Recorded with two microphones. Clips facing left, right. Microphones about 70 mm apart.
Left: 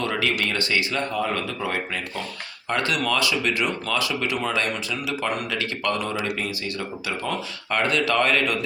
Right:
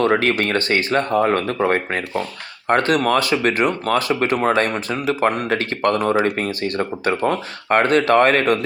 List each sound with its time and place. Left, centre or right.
0.0 s speech: right